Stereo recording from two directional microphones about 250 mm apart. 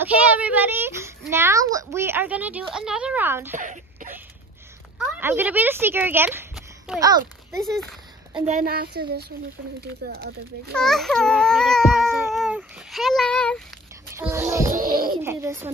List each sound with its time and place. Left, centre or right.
0.0 s a child's voice: centre
3.5 s a sound: right
4.9 s a child's voice: centre
7.5 s a sound: centre
8.4 s speech: right
10.7 s speech: centre
12.3 s a sound: centre
14.1 s a child's voice: centre
14.7 s speech: right
15.0 s a child's voice: centre